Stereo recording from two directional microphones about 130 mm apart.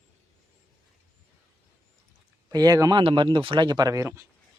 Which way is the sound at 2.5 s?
30° right (ahead or behind).